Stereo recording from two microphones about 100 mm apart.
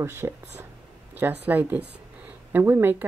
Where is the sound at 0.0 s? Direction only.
25° right (ahead or behind).